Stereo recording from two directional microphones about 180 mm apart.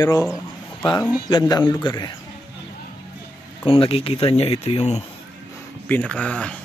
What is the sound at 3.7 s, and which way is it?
Speech, 30° left (ahead or behind).